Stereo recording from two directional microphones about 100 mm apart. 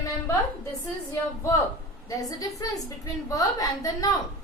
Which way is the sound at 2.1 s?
35° left (ahead or behind).